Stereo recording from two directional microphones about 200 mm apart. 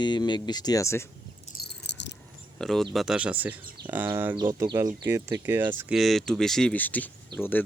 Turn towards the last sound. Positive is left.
turn(degrees=10)  # may be behind; listen again after turning